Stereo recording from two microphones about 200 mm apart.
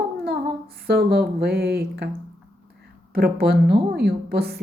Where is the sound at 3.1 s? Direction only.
50° right (ahead or behind).